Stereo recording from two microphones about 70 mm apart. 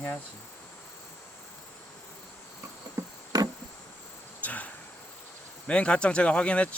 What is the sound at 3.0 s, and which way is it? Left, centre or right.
Cricket, right.